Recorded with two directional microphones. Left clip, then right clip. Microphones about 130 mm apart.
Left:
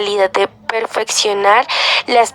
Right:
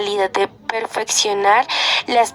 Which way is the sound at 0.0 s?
25° left (ahead or behind).